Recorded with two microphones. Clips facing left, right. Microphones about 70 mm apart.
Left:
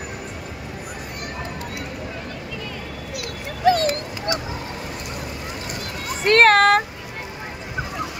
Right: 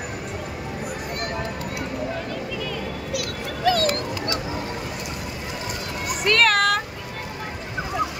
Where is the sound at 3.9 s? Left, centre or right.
Centre.